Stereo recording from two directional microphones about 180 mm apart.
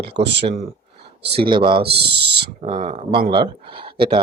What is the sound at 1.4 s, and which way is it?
Speech, 25° right (ahead or behind).